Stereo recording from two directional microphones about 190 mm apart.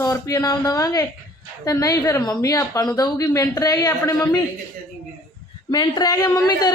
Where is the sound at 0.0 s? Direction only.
15° left (ahead or behind).